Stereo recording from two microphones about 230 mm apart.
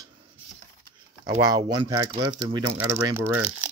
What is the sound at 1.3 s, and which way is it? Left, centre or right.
Speech, centre.